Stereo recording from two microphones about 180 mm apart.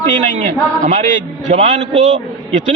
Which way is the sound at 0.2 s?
45° right (ahead or behind).